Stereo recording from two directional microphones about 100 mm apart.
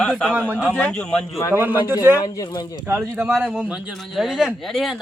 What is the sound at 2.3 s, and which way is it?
Speech, 40° left (ahead or behind).